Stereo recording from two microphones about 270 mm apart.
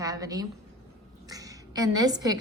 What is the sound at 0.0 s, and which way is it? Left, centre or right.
A woman's voice, centre.